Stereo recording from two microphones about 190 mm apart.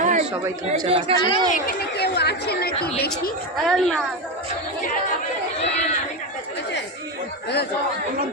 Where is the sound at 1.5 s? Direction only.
60° left (ahead or behind).